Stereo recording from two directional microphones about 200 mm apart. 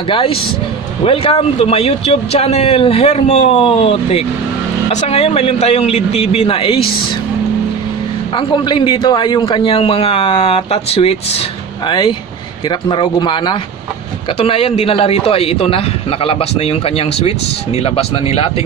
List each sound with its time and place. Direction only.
0.1 s a man's voice: 25° left (ahead or behind)
8.4 s a man's voice: 25° left (ahead or behind)